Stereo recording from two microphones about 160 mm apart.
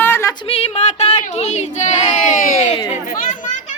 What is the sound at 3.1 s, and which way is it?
Children playing, 50° left (ahead or behind).